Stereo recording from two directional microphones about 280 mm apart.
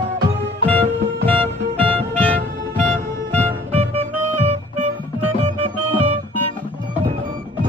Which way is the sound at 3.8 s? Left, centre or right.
Right.